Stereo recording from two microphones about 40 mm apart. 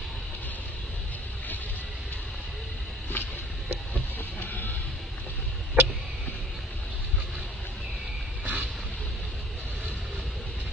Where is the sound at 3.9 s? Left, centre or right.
Left.